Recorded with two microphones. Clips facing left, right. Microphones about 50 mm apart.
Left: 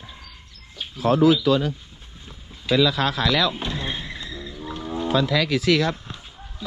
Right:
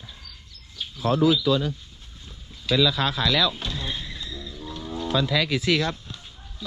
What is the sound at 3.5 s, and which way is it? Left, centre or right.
Music, left.